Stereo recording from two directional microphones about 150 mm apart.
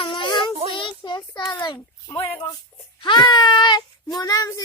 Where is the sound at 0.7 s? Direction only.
35° left (ahead or behind).